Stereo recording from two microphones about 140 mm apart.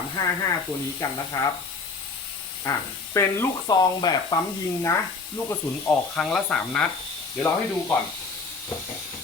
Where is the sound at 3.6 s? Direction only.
30° left (ahead or behind).